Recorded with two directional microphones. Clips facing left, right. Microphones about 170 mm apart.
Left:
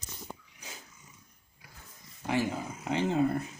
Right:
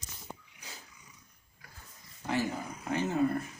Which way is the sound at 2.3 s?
20° left (ahead or behind).